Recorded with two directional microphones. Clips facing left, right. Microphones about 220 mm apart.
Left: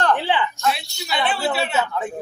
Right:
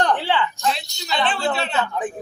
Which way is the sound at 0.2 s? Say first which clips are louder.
Even; 15° left (ahead or behind).